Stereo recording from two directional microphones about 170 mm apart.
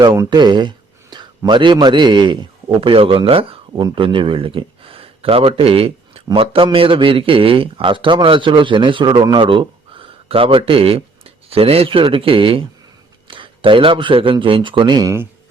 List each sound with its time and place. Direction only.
0.0 s a man's voice: 25° right (ahead or behind)